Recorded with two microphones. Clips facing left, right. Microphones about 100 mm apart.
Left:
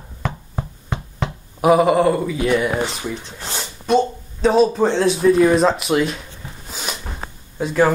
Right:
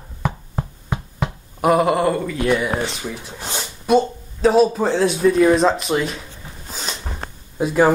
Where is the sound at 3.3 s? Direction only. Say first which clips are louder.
Right 1 dB; 15° right (ahead or behind).